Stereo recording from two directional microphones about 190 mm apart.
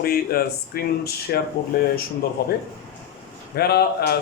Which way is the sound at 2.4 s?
55° left (ahead or behind).